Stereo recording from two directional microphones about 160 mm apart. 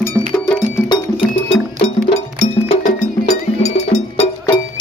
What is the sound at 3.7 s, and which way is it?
Cowbell, 45° left (ahead or behind).